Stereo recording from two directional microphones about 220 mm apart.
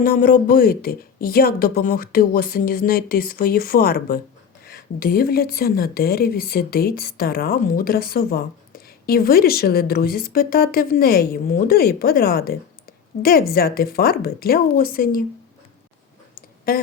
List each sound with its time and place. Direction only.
0.0 s a woman's voice: 40° left (ahead or behind)
16.7 s a woman's voice: 40° left (ahead or behind)